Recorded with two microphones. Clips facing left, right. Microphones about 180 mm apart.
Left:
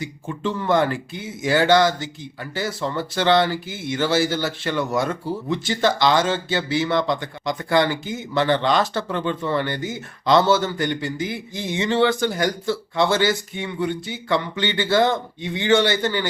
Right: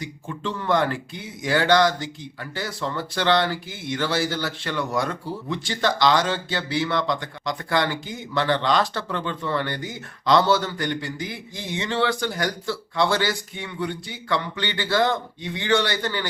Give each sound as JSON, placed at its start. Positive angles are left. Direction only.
{"t": 0.0, "sound": "speech", "side_deg": 5}
{"t": 2.8, "sound": "speech", "side_deg": 20}
{"t": 4.0, "sound": "speech", "side_deg": 5}
{"t": 4.3, "sound": "speech", "side_deg": 25}